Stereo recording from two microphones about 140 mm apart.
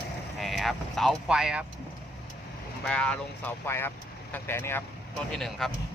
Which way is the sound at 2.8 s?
5° left (ahead or behind).